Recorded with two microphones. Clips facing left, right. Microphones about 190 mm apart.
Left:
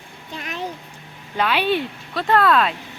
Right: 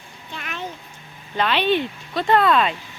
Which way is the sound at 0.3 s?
35° left (ahead or behind).